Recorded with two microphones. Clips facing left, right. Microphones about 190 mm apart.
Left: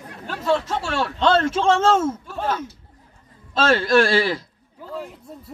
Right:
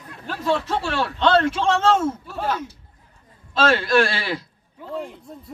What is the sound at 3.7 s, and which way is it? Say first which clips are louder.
Speech: left 7 dB; 35° left (ahead or behind).